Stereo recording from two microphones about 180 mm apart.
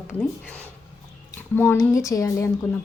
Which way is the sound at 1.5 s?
10° left (ahead or behind).